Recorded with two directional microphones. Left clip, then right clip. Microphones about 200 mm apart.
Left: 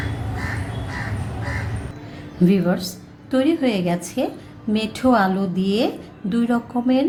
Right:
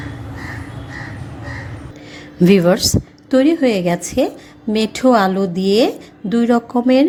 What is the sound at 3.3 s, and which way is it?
A woman's voice, 30° right (ahead or behind).